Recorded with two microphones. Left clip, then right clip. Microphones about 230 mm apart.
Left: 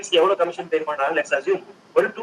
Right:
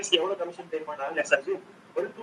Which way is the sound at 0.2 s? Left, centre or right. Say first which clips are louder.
Left 11 dB; left.